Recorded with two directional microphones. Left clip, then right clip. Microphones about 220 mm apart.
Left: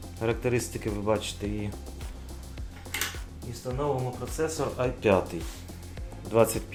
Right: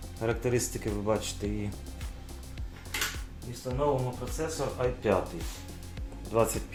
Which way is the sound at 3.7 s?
40° left (ahead or behind).